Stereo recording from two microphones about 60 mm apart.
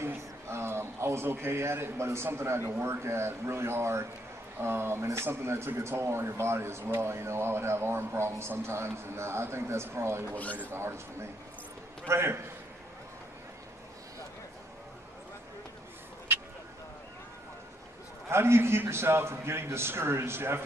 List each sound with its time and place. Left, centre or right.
0.0 s a man's voice: right
10.3 s speech: left
10.7 s speech: right
18.3 s speech: right